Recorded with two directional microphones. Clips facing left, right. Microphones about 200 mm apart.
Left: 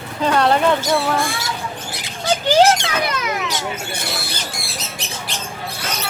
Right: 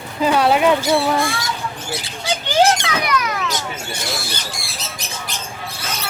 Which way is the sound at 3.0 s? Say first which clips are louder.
Right 1 dB; 25° left (ahead or behind).